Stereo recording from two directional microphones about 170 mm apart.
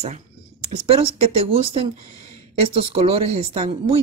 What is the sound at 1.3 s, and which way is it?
Speech, 35° right (ahead or behind).